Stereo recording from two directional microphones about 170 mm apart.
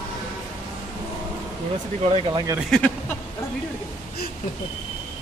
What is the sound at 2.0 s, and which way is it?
Speech, 30° right (ahead or behind).